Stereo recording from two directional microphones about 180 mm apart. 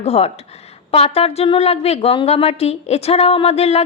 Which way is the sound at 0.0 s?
35° left (ahead or behind).